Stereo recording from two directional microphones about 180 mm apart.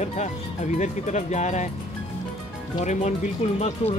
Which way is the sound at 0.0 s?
40° left (ahead or behind).